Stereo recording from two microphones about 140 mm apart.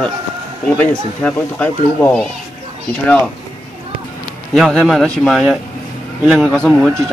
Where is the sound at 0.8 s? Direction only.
10° left (ahead or behind).